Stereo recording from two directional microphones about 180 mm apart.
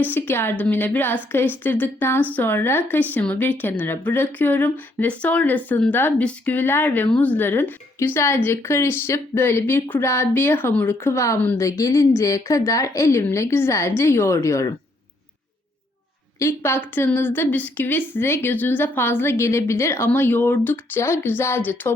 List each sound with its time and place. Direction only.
0.0 s speech: 10° left (ahead or behind)
16.4 s speech: 15° left (ahead or behind)